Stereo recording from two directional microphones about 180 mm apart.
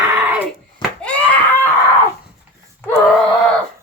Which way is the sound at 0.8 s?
Centre (ahead or behind).